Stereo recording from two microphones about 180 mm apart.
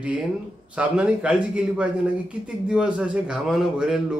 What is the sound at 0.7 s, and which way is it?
A man's voice, 5° right (ahead or behind).